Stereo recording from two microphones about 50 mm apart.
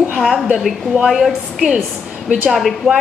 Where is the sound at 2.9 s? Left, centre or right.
Centre.